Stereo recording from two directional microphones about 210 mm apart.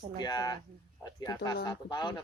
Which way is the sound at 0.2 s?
20° left (ahead or behind).